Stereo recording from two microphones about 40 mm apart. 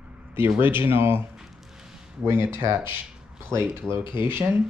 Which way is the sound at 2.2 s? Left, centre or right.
Right.